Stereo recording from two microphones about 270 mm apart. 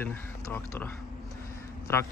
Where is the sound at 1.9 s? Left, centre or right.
Centre.